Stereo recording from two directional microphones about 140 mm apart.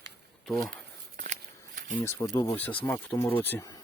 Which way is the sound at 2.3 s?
30° left (ahead or behind).